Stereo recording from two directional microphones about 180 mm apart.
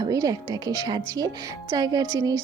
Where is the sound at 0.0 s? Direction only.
20° right (ahead or behind).